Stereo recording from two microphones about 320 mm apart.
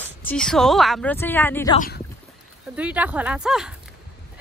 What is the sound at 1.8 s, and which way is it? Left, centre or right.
Speech, left.